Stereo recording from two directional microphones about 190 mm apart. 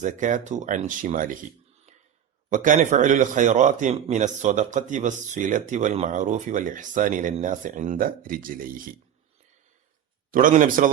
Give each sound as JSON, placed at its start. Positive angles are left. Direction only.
{"t": 0.0, "sound": "a man's voice", "side_deg": -40}
{"t": 2.5, "sound": "a man's voice", "side_deg": -45}
{"t": 10.3, "sound": "a man's voice", "side_deg": -45}